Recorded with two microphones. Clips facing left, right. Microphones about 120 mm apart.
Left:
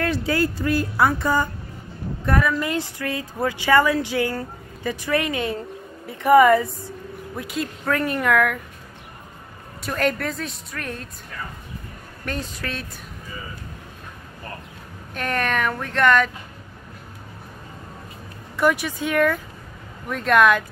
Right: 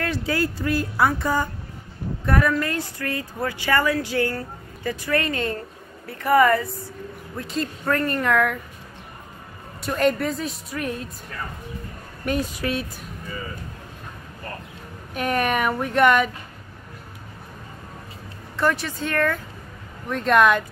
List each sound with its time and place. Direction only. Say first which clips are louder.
0.0 s speech: left 2 dB; 25° left (ahead or behind)
2.6 s speech: left 2 dB; 15° left (ahead or behind); by 8.5 s centre (ahead or behind)
9.8 s speech: right 2 dB; centre (ahead or behind)
12.3 s speech: right 5 dB; 10° right (ahead or behind)
15.1 s speech: right 2 dB; 10° right (ahead or behind)
18.6 s speech: left 2 dB; 10° left (ahead or behind)